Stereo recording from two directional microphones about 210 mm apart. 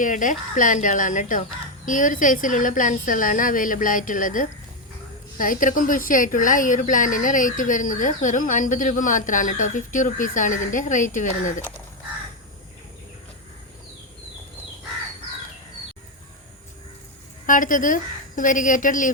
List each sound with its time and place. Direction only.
0.0 s a woman's voice: 40° left (ahead or behind)
17.4 s a woman's voice: 40° left (ahead or behind)